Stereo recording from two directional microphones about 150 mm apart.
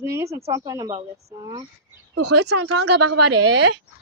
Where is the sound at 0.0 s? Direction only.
20° right (ahead or behind).